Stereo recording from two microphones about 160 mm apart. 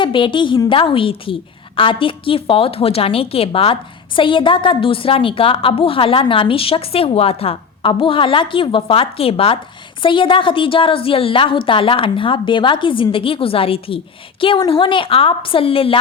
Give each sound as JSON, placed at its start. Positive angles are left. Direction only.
{"t": 0.0, "sound": "a woman's voice", "side_deg": 30}